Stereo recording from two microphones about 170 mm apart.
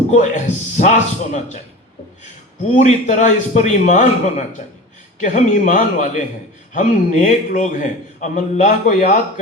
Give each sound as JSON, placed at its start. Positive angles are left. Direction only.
{"t": 0.1, "sound": "a man's voice", "side_deg": 45}
{"t": 2.7, "sound": "a man's voice", "side_deg": 45}